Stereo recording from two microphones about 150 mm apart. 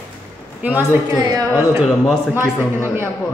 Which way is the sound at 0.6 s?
10° right (ahead or behind).